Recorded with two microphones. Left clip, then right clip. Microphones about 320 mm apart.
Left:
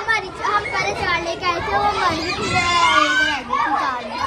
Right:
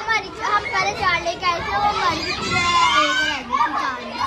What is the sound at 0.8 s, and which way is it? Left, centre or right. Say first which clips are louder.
Children playing: right 1 dB; right.